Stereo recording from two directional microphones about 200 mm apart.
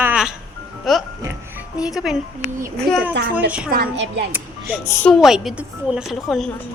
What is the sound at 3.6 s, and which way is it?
Speech, 50° right (ahead or behind).